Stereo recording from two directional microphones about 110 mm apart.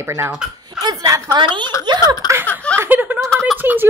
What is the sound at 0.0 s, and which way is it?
Speech, 25° right (ahead or behind).